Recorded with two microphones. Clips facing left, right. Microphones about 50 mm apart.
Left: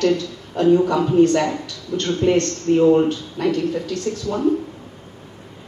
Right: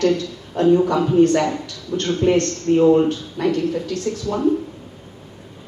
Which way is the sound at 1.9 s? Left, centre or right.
Right.